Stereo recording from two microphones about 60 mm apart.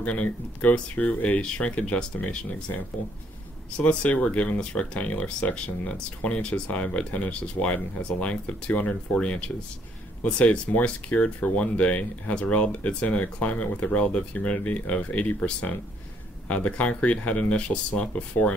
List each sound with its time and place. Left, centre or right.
0.0 s speech: left